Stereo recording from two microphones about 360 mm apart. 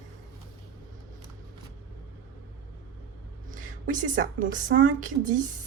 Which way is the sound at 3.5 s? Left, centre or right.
Right.